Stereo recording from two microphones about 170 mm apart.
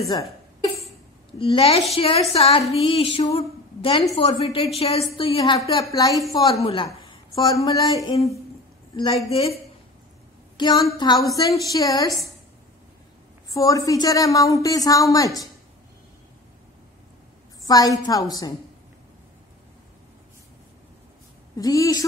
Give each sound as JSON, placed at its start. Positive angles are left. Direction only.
{"t": 0.1, "sound": "a sound", "side_deg": 35}
{"t": 5.9, "sound": "a woman's voice", "side_deg": 20}
{"t": 6.3, "sound": "a sound", "side_deg": 35}
{"t": 7.1, "sound": "speech", "side_deg": 25}
{"t": 8.9, "sound": "a sound", "side_deg": 30}
{"t": 10.6, "sound": "a woman's voice", "side_deg": 25}
{"t": 13.5, "sound": "a woman's voice", "side_deg": 20}
{"t": 17.6, "sound": "a woman's voice", "side_deg": 20}
{"t": 21.5, "sound": "a woman's voice", "side_deg": 20}